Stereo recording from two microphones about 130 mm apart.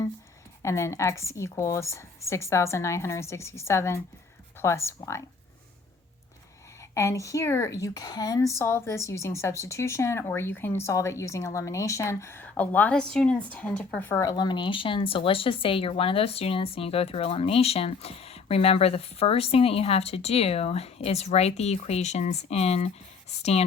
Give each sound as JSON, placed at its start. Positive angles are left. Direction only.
{"t": 0.6, "sound": "speech", "side_deg": 20}
{"t": 6.9, "sound": "speech", "side_deg": 25}
{"t": 14.3, "sound": "speech", "side_deg": 35}